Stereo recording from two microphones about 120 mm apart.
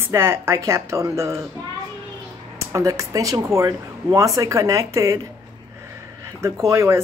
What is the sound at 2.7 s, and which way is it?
Speech, 25° right (ahead or behind).